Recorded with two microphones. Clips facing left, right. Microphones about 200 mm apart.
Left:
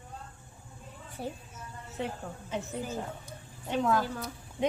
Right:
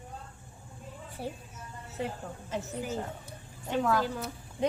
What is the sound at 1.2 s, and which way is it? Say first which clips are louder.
Speech: even; 5° right (ahead or behind).